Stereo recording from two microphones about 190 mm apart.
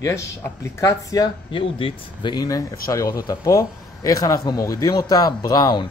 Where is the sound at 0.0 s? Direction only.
15° left (ahead or behind).